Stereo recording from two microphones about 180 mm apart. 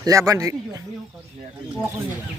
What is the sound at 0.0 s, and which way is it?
Speech, 20° right (ahead or behind).